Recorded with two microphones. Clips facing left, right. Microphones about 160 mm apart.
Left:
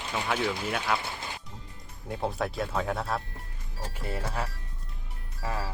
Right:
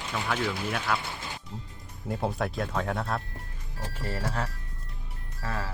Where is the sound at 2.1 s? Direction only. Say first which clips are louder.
Right 1 dB; centre (ahead or behind).